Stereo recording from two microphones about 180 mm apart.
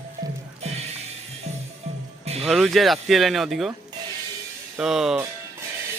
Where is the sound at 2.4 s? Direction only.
Centre (ahead or behind).